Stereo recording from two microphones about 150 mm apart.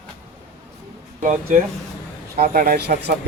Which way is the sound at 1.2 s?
55° right (ahead or behind).